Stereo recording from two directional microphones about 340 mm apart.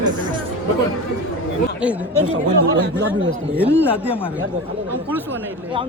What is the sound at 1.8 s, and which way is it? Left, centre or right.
Speech, centre.